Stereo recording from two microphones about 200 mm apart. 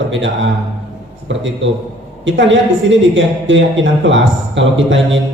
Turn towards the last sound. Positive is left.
turn(degrees=-70)  # may be behind; listen again after turning